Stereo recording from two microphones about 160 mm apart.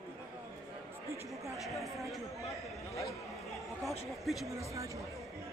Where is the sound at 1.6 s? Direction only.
Centre (ahead or behind).